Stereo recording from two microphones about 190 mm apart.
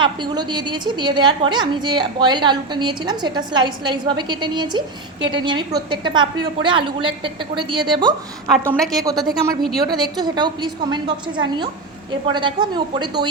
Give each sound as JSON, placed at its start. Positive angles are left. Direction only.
{"t": 0.0, "sound": "a woman's voice", "side_deg": -25}
{"t": 8.5, "sound": "a woman's voice", "side_deg": 0}
{"t": 9.0, "sound": "a woman's voice", "side_deg": -20}